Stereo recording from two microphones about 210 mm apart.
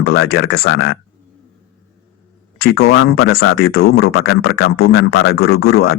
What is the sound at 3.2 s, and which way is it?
Speech, 50° left (ahead or behind).